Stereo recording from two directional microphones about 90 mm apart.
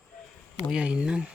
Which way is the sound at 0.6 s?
10° right (ahead or behind).